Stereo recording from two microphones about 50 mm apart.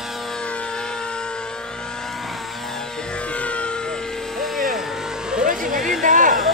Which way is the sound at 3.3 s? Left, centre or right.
Left.